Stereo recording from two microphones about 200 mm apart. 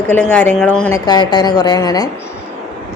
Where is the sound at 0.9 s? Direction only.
20° left (ahead or behind).